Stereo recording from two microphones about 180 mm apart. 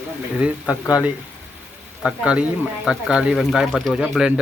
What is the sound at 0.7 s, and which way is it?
Speech, 20° left (ahead or behind).